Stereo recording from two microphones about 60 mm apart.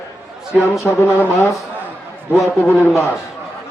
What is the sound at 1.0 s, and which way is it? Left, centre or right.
Speech, left.